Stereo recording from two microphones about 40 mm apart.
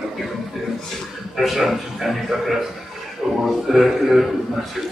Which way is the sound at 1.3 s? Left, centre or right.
Centre.